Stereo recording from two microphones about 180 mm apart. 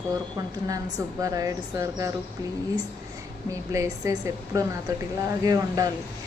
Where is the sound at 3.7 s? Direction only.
15° right (ahead or behind).